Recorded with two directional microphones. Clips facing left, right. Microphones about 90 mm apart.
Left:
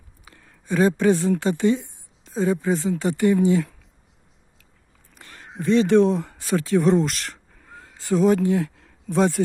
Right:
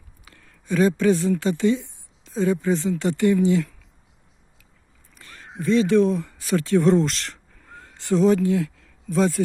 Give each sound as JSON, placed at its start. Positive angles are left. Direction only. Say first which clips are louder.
{"t": 0.3, "sound": "a sound", "louder": "even", "side_deg": 20}
{"t": 1.4, "sound": "speech", "louder": "even", "side_deg": 30}
{"t": 3.1, "sound": "speech", "louder": "even", "side_deg": 20}
{"t": 5.2, "sound": "speech", "louder": "even", "side_deg": 25}
{"t": 6.7, "sound": "speech", "louder": "right 1 dB", "side_deg": 5}
{"t": 7.7, "sound": "a sound", "louder": "even", "side_deg": 10}
{"t": 8.3, "sound": "speech", "louder": "even", "side_deg": 25}